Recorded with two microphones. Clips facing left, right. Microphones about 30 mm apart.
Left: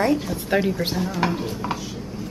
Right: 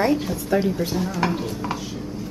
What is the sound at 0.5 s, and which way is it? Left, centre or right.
Speech, left.